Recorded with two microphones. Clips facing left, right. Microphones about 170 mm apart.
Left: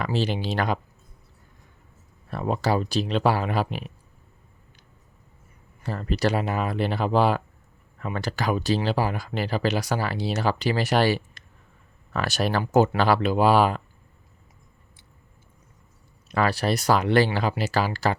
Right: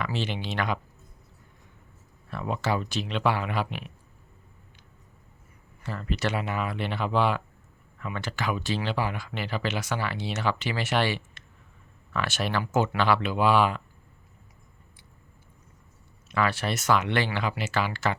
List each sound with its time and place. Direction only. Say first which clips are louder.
0.0 s speech: left 5 dB; 35° left (ahead or behind)
2.3 s speech: left 4 dB; 35° left (ahead or behind)
5.8 s speech: left 5 dB; 40° left (ahead or behind)
16.3 s speech: left 4 dB; 35° left (ahead or behind)